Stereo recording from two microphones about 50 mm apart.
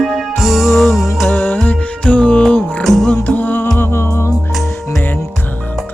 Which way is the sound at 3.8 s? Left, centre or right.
Left.